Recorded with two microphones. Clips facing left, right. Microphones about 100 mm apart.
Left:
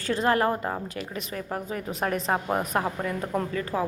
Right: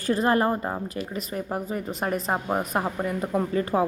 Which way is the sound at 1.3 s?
25° right (ahead or behind).